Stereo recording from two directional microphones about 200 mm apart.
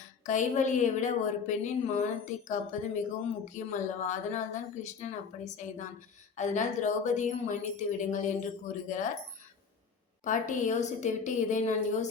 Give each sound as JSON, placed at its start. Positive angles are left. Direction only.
{"t": 0.3, "sound": "a woman's voice", "side_deg": 40}
{"t": 10.2, "sound": "a woman's voice", "side_deg": 40}